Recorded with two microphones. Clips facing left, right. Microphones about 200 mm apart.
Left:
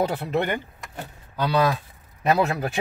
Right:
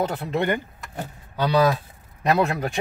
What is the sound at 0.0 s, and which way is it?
Speech, 5° left (ahead or behind).